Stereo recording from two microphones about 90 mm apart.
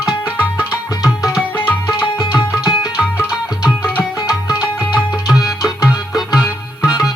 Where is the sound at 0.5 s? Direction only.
10° right (ahead or behind).